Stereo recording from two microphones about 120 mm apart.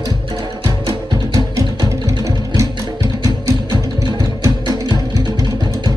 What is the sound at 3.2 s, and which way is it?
Music, 30° right (ahead or behind).